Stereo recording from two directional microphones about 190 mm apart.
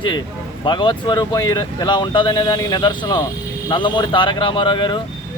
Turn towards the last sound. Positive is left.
turn(degrees=25)  # may be behind; listen again after turning